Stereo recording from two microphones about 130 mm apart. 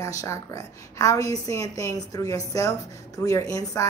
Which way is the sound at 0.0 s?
25° left (ahead or behind).